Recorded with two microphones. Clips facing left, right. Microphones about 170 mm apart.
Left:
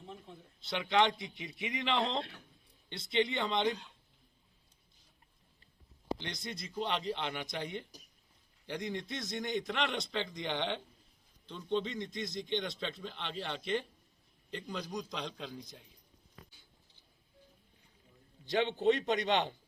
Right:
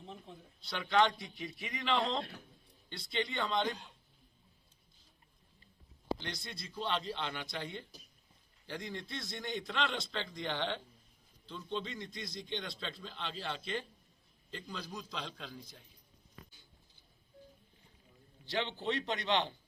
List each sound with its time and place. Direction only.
0.6 s a man's voice: 20° left (ahead or behind)
6.1 s a man's voice: 20° left (ahead or behind)
18.8 s a man's voice: 45° left (ahead or behind)